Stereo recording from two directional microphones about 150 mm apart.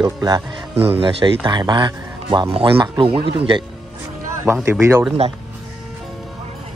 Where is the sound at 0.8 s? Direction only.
35° right (ahead or behind).